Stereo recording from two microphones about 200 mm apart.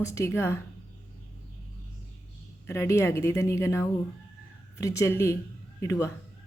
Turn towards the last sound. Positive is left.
turn(degrees=15)  # may be behind; listen again after turning